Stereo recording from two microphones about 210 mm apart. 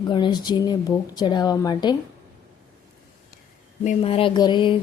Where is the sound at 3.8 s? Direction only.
30° left (ahead or behind).